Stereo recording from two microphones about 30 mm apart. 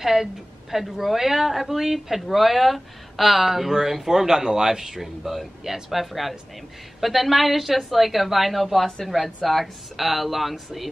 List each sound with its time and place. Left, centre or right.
0.0 s a woman's voice: centre
4.3 s speech: centre
5.0 s speech: centre